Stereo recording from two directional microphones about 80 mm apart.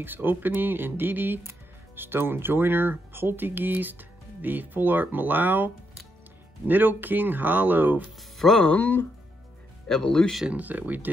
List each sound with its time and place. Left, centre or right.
0.0 s speech: right
6.7 s speech: right
8.2 s speech: centre
8.6 s speech: left
9.8 s speech: centre
10.4 s speech: centre